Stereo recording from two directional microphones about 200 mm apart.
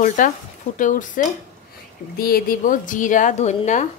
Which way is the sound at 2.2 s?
45° left (ahead or behind).